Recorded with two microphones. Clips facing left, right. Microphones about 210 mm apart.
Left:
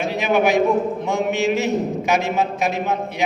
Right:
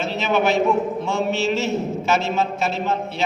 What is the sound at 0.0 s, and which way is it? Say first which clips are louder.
A man's voice: left 2 dB; 15° left (ahead or behind).